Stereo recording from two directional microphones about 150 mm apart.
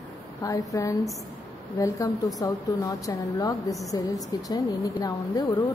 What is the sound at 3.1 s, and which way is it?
Speech, 25° left (ahead or behind).